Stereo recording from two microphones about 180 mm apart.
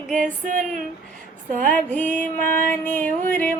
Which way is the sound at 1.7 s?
10° left (ahead or behind).